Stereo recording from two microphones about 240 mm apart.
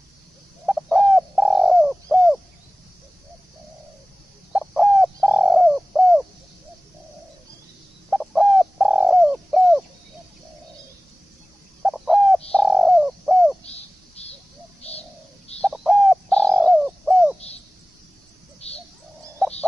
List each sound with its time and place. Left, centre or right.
0.7 s bird: centre
4.5 s bird: centre
8.1 s bird: centre
11.8 s owl: centre
12.4 s bird: centre
13.7 s a sound: left
14.8 s bird: left
15.6 s bird: centre
18.6 s bird: left